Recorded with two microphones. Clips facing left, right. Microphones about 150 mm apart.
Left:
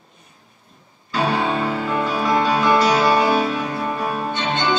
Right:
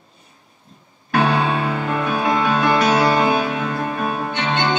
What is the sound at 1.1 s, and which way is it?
Music, 60° right (ahead or behind).